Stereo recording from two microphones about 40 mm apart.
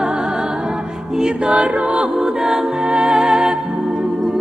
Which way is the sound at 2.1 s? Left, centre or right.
Centre.